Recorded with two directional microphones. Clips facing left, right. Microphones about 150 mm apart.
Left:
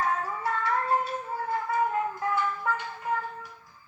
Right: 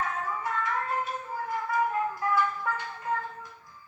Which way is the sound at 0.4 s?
30° left (ahead or behind).